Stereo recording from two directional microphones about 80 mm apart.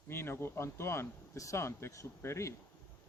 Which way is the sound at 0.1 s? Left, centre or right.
Left.